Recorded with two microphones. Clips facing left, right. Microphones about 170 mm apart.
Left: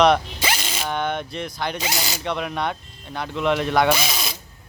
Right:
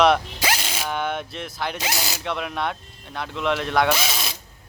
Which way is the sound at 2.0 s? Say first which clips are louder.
Left 2 dB; centre (ahead or behind).